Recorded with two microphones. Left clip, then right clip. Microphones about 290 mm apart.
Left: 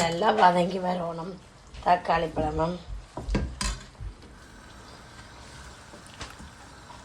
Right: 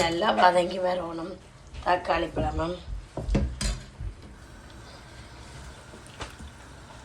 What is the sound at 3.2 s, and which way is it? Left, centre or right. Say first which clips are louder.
Dishes: right 2 dB; centre.